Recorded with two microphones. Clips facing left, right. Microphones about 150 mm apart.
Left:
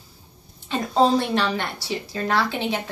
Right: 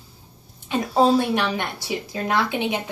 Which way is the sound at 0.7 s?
10° right (ahead or behind).